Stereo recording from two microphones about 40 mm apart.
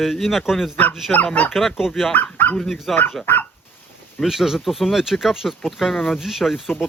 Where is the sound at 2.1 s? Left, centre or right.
Left.